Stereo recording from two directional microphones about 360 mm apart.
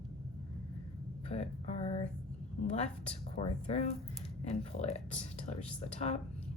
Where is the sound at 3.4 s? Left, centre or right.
Centre.